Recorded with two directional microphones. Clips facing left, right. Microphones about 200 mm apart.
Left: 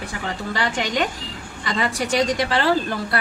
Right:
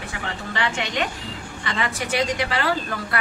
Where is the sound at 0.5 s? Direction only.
40° left (ahead or behind).